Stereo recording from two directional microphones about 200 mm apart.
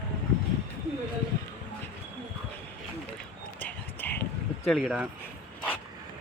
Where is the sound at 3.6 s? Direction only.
10° left (ahead or behind).